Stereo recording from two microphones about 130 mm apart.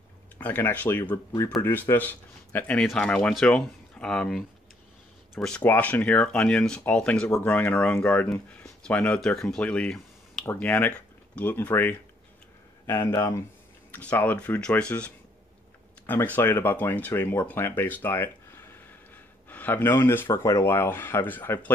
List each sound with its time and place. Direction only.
0.4 s speech: 15° left (ahead or behind)
12.8 s speech: 25° left (ahead or behind)